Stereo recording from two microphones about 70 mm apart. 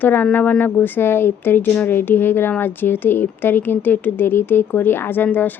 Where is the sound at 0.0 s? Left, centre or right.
Left.